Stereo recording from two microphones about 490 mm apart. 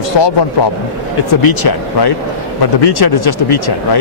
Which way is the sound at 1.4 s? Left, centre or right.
Left.